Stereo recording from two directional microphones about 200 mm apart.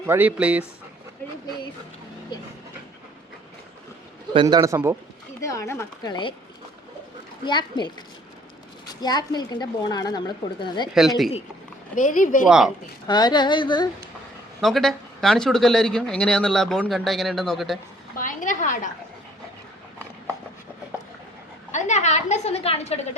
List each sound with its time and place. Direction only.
0.0 s a man's voice: 10° right (ahead or behind)
4.4 s a man's voice: 20° right (ahead or behind)
5.4 s speech: 15° left (ahead or behind)
7.4 s speech: 20° left (ahead or behind)
8.9 s speech: 20° left (ahead or behind)
10.9 s a man's voice: centre (ahead or behind)
11.9 s a woman's voice: 40° left (ahead or behind)
12.5 s a man's voice: 5° right (ahead or behind)
13.1 s speech: 20° left (ahead or behind)
14.6 s a man's voice: centre (ahead or behind)
18.2 s a woman's voice: 40° left (ahead or behind)
21.7 s a woman's voice: 35° left (ahead or behind)